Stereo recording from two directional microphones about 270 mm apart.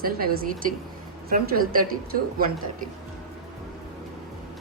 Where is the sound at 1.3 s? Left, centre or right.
Right.